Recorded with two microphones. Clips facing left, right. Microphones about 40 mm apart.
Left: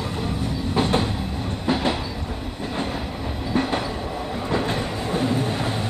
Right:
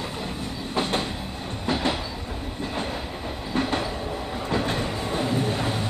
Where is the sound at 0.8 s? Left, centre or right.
Centre.